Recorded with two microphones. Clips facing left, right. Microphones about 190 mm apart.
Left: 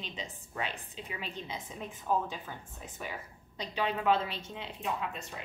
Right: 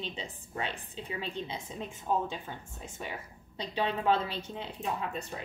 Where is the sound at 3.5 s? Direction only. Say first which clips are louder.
Right 1 dB; 30° right (ahead or behind).